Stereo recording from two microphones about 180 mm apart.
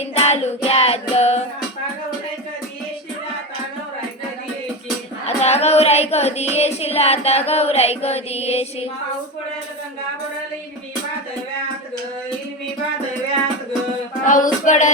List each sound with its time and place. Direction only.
0.0 s music: 35° left (ahead or behind)
5.2 s child singing: 35° left (ahead or behind)
14.3 s child singing: 45° left (ahead or behind)